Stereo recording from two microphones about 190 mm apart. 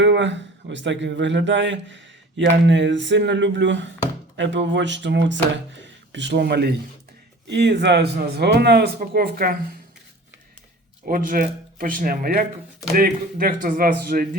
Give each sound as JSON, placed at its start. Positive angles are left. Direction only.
{"t": 0.0, "sound": "a man's voice", "side_deg": -70}
{"t": 11.0, "sound": "speech", "side_deg": -45}